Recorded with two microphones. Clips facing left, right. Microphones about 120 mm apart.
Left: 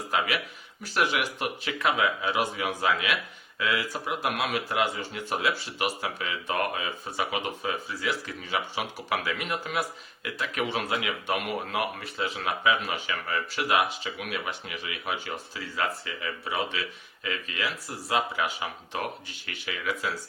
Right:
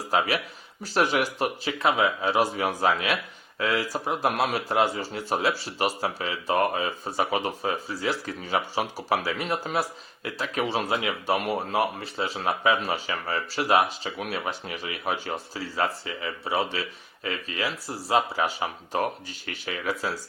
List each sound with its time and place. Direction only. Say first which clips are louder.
0.1 s speech: right 4 dB; 35° right (ahead or behind)